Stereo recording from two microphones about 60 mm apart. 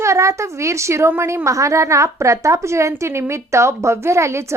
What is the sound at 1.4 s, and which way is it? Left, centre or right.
A woman's voice, right.